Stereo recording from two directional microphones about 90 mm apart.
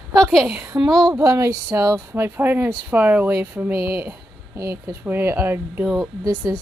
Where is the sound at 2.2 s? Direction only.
20° right (ahead or behind).